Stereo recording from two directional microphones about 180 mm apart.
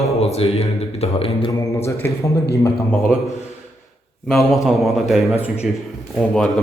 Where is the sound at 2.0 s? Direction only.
15° left (ahead or behind).